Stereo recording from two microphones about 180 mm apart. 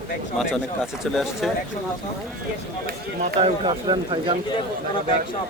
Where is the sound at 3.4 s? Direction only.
30° right (ahead or behind).